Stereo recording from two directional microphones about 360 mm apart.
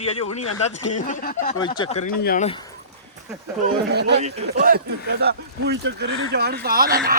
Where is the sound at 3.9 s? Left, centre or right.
Right.